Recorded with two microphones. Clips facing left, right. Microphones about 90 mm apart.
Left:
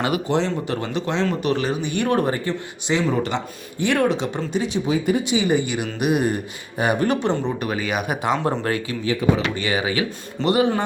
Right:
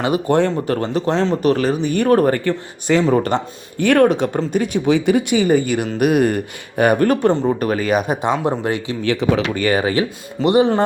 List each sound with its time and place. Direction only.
0.3 s speech: 55° right (ahead or behind)
0.8 s speech: 40° right (ahead or behind)
2.3 s speech: 60° right (ahead or behind)
4.9 s speech: 85° right
5.2 s speech: 50° right (ahead or behind); by 9.0 s 20° right (ahead or behind)
9.2 s speech: 90° right
9.6 s speech: 45° right (ahead or behind)
10.4 s speech: 25° right (ahead or behind)